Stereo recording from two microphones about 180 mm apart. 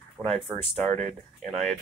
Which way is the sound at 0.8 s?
40° right (ahead or behind).